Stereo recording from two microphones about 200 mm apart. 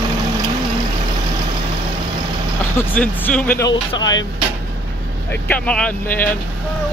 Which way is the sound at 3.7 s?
20° left (ahead or behind).